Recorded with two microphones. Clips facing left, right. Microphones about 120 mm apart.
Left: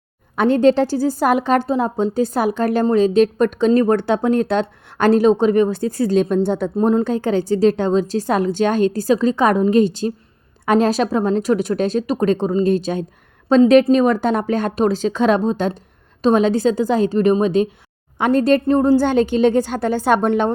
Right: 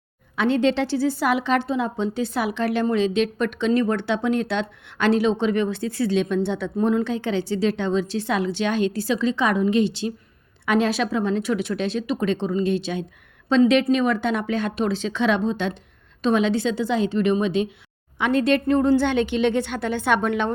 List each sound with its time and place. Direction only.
0.3 s a woman's voice: 45° left (ahead or behind)